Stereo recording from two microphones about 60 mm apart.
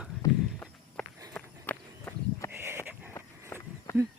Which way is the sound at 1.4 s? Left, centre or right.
Left.